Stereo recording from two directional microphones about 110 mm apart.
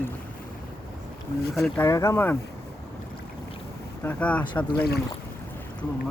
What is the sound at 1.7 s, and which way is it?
Speech, 25° left (ahead or behind).